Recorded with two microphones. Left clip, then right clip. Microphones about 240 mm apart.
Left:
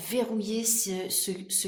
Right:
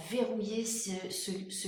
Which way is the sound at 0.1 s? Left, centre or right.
Left.